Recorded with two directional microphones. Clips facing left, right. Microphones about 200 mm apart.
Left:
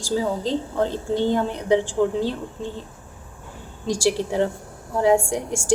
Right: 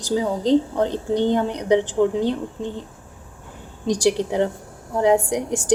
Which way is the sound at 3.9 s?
20° right (ahead or behind).